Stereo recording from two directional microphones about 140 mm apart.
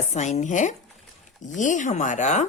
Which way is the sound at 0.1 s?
55° left (ahead or behind).